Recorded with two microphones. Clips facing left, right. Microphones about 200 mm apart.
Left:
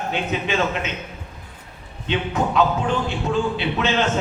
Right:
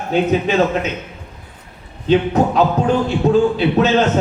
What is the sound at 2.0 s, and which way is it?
Music, 40° right (ahead or behind).